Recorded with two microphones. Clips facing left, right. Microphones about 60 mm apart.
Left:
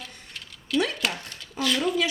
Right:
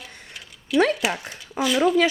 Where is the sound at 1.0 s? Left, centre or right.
Centre.